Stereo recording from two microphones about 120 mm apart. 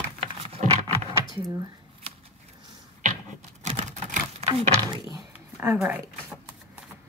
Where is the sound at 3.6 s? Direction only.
75° right (ahead or behind).